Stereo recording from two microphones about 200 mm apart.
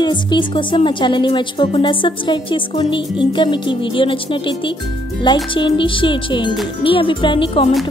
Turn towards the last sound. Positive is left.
turn(degrees=25)  # may be behind; listen again after turning